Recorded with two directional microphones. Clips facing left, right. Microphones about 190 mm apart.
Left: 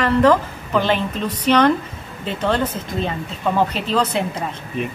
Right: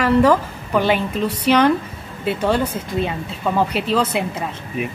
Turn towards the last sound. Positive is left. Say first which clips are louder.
# even
turn(degrees=-10)  # may be behind; listen again after turning